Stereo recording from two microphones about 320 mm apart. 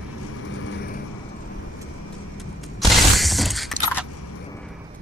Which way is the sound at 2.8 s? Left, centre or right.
Centre.